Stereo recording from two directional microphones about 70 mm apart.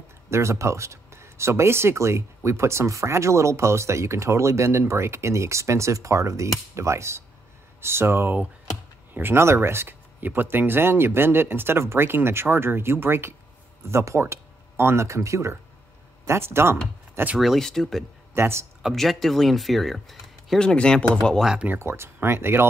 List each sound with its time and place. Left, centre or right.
0.3 s speech: right
17.4 s speech: centre
18.3 s speech: right
18.8 s speech: centre
20.5 s speech: centre
21.6 s speech: right